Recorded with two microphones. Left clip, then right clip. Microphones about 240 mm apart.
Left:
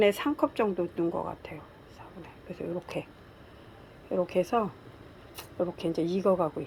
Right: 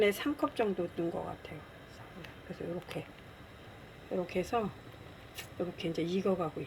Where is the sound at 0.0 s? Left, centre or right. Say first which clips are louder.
Left 5 dB; centre.